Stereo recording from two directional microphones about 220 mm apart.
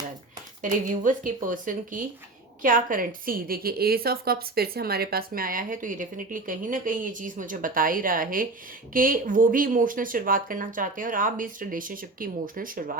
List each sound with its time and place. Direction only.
0.6 s a woman's voice: 35° right (ahead or behind)